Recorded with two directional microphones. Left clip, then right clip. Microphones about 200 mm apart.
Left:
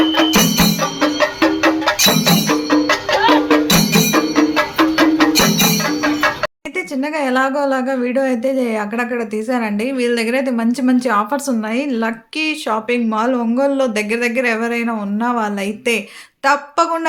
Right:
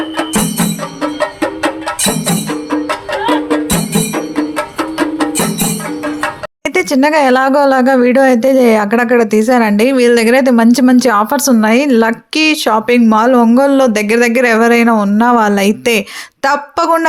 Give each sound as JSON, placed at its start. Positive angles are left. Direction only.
{"t": 2.0, "sound": "music", "side_deg": 0}
{"t": 5.1, "sound": "music", "side_deg": -5}
{"t": 6.7, "sound": "speech", "side_deg": -40}